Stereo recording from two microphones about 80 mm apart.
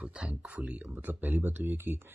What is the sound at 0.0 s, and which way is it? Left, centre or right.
Speech, centre.